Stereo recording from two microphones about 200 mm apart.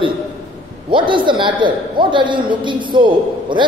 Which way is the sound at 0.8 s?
25° right (ahead or behind).